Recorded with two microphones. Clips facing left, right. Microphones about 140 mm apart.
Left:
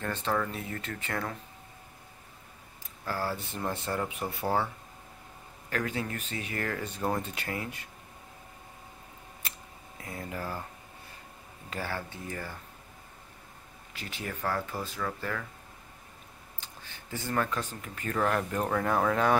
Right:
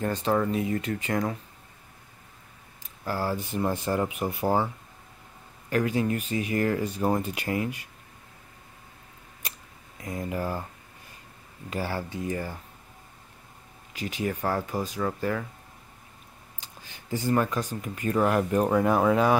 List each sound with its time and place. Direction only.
0.0 s speech: 15° right (ahead or behind)
3.1 s speech: 15° right (ahead or behind)
5.7 s speech: 15° right (ahead or behind)
10.0 s speech: 20° right (ahead or behind)
11.7 s speech: 15° right (ahead or behind)
13.9 s speech: 15° right (ahead or behind)
16.5 s speech: 15° right (ahead or behind)